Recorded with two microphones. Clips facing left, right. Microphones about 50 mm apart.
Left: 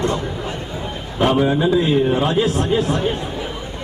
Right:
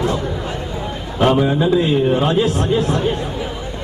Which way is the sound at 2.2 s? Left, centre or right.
Right.